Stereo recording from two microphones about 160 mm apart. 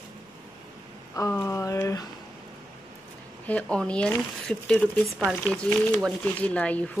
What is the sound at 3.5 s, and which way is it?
Speech, 5° left (ahead or behind).